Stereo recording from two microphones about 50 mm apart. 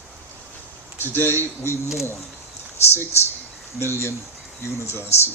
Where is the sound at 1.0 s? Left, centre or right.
Left.